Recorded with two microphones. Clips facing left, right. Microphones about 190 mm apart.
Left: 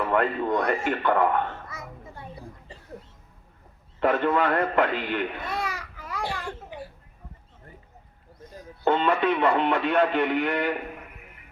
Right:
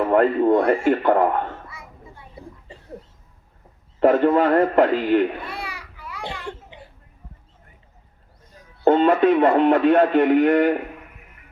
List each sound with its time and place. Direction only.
0.0 s a man's voice: 40° right (ahead or behind)
1.6 s children playing: 40° left (ahead or behind)
4.0 s a man's voice: 40° right (ahead or behind)
5.4 s a sound: 40° left (ahead or behind)
6.4 s a sound: 20° right (ahead or behind)
8.8 s speech: 45° right (ahead or behind)